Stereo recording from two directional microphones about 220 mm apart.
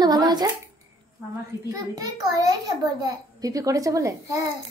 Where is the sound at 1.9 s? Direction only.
15° right (ahead or behind).